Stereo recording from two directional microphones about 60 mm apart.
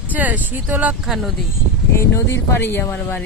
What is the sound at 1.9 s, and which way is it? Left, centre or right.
Speech, left.